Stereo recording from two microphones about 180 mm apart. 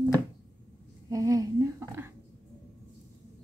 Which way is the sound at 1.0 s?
20° right (ahead or behind).